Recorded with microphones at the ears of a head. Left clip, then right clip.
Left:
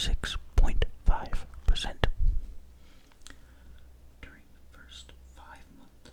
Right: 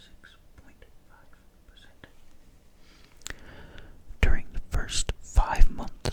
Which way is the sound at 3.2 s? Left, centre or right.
Right.